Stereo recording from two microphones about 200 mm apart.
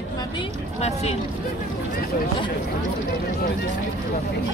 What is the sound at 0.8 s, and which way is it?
Speech, 30° left (ahead or behind).